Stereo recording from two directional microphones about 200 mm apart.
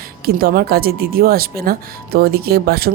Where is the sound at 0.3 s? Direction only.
50° right (ahead or behind).